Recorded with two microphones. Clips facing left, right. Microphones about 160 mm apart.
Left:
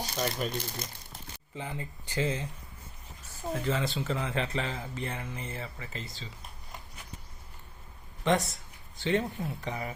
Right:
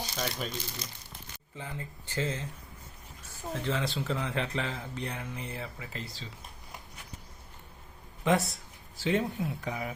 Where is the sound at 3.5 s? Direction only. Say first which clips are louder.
Left 1 dB; 5° left (ahead or behind).